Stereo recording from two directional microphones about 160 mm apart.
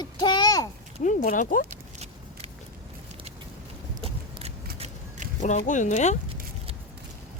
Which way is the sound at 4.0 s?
35° right (ahead or behind).